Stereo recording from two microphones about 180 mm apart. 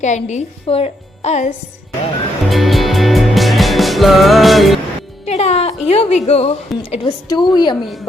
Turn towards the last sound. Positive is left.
turn(degrees=25)  # may be behind; listen again after turning